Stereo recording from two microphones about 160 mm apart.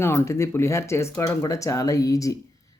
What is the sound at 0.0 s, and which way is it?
Speech, 15° left (ahead or behind).